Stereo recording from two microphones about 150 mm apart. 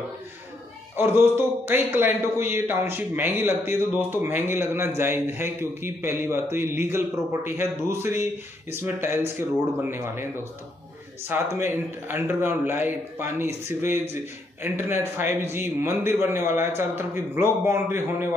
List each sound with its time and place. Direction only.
1.7 s a man's voice: 15° right (ahead or behind)
11.2 s a man's voice: 15° right (ahead or behind)